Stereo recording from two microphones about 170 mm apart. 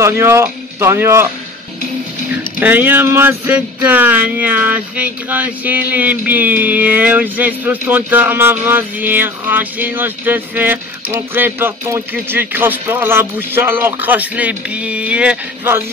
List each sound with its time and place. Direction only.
0.0 s speech: 15° right (ahead or behind)
2.6 s speech: 10° right (ahead or behind)